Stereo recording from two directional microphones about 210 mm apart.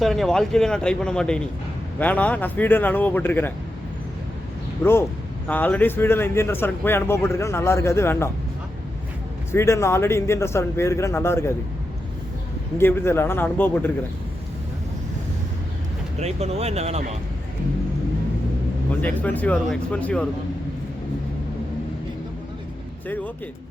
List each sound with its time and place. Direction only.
0.0 s a man's voice: centre (ahead or behind)
4.8 s a man's voice: 10° left (ahead or behind)
9.5 s a man's voice: 10° left (ahead or behind)
12.7 s a man's voice: 10° left (ahead or behind)
16.2 s speech: 30° right (ahead or behind)
18.9 s a man's voice: 5° left (ahead or behind)